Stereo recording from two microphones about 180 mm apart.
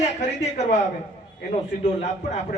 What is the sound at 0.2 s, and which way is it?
Speech, 40° left (ahead or behind).